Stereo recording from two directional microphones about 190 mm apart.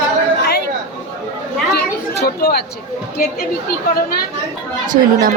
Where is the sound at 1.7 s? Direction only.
55° left (ahead or behind).